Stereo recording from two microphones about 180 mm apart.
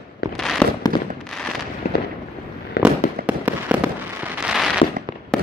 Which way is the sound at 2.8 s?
70° left (ahead or behind).